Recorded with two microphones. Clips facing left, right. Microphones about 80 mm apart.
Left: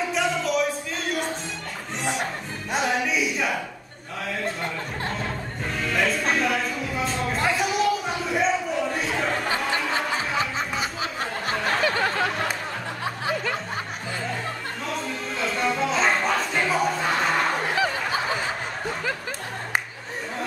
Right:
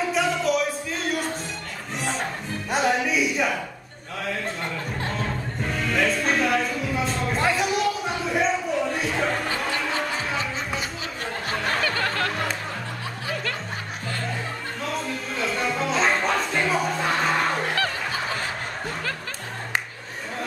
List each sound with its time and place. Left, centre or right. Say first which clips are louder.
0.1 s music: right 2 dB; centre
2.7 s a sound: right 2 dB; centre
5.0 s music: right 1 dB; centre
11.8 s music: left 2 dB; centre
15.0 s music: even; centre